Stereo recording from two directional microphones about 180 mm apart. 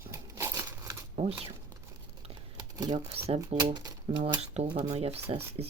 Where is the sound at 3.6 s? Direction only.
20° right (ahead or behind).